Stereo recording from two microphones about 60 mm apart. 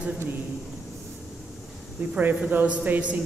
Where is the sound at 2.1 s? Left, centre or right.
Right.